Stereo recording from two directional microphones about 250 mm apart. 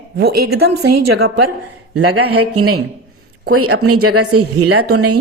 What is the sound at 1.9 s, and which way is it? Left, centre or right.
A woman's voice, right.